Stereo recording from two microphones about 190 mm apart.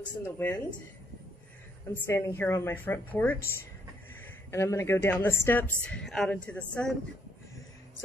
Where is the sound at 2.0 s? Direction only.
10° left (ahead or behind).